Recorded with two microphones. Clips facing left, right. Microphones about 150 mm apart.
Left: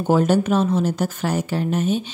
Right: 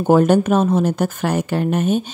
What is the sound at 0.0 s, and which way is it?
A woman's voice, 55° right (ahead or behind).